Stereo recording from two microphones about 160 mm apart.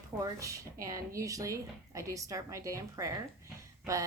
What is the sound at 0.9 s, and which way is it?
A woman's voice, 20° right (ahead or behind).